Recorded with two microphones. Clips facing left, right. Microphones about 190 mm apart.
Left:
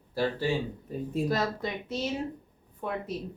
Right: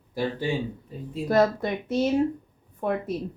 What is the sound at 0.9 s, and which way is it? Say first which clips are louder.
Speech: left 4 dB; 45° left (ahead or behind).